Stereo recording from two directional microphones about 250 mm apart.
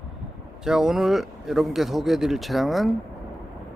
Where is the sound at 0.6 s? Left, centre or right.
Centre.